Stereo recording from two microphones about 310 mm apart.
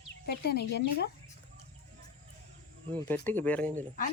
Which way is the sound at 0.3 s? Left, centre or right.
Left.